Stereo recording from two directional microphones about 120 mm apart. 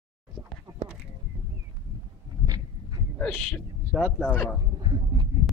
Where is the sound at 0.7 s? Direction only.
30° right (ahead or behind).